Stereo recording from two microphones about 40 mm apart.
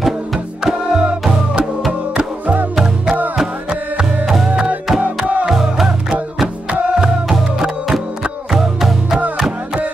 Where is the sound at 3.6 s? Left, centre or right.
Right.